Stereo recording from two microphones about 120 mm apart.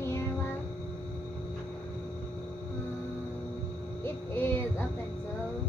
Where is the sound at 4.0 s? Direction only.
20° left (ahead or behind).